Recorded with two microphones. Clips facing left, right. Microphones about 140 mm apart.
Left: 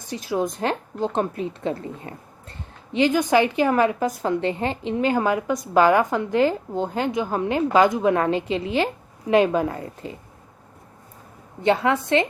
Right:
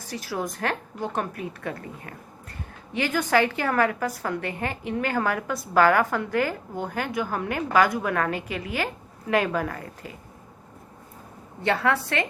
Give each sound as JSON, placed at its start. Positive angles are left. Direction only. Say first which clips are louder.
{"t": 0.0, "sound": "a woman's voice", "louder": "left 6 dB", "side_deg": 20}
{"t": 11.6, "sound": "a woman's voice", "louder": "left 4 dB", "side_deg": 20}